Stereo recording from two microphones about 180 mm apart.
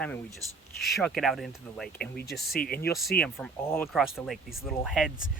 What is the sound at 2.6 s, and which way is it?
Speech, 55° left (ahead or behind).